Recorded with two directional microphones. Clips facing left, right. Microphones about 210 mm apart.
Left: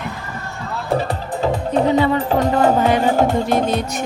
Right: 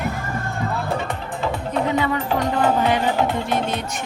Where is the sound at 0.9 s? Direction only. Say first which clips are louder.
Left 5 dB; 35° left (ahead or behind).